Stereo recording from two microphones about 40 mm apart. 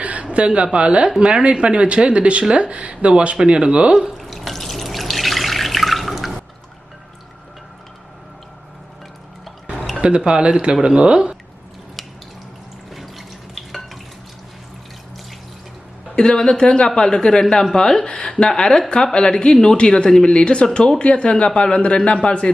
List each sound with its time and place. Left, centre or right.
0.0 s a woman's voice: right
4.2 s water: centre
10.0 s speech: right
12.9 s water: centre
16.1 s speech: left